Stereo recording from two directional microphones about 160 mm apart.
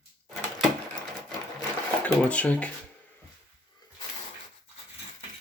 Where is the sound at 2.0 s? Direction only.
10° left (ahead or behind).